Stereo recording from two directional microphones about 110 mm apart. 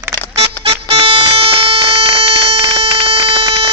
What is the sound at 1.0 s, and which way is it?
Music, 50° right (ahead or behind).